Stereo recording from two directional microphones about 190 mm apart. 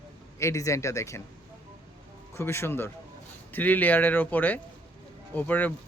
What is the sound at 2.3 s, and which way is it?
Speech, 15° left (ahead or behind).